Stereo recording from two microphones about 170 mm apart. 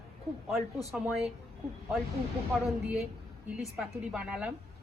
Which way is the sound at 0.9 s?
Centre (ahead or behind).